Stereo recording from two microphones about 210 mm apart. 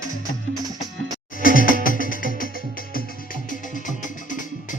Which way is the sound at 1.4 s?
40° left (ahead or behind).